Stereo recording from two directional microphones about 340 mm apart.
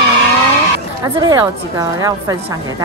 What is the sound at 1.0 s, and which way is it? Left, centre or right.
Speech, centre.